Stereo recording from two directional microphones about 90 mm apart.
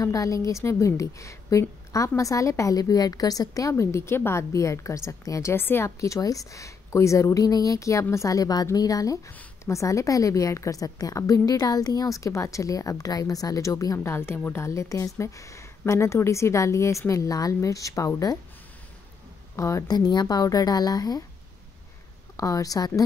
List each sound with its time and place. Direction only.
0.0 s a woman's voice: 40° left (ahead or behind)
19.5 s a woman's voice: 30° left (ahead or behind)
19.9 s a woman's voice: 50° left (ahead or behind)
22.4 s a woman's voice: 40° left (ahead or behind)